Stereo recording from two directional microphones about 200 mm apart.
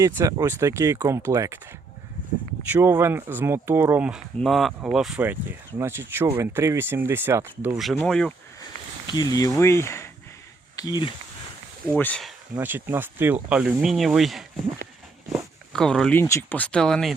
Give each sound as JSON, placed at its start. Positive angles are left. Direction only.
{"t": 0.0, "sound": "speech", "side_deg": -15}
{"t": 2.6, "sound": "speech", "side_deg": -10}
{"t": 7.8, "sound": "speech", "side_deg": 0}
{"t": 9.0, "sound": "speech", "side_deg": 20}
{"t": 11.9, "sound": "speech", "side_deg": 5}
{"t": 12.5, "sound": "speech", "side_deg": -10}